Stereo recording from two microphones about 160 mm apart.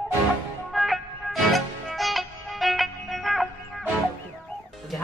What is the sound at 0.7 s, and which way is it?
Music, centre (ahead or behind).